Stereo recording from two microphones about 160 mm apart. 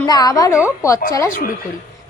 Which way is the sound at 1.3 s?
60° left (ahead or behind).